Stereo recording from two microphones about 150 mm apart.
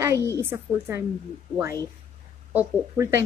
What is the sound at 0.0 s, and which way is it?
A woman's voice, 20° right (ahead or behind).